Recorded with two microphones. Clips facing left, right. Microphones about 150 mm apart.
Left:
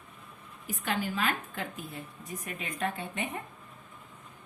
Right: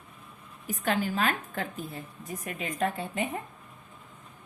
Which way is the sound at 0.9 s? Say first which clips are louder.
Right 3 dB; 40° right (ahead or behind).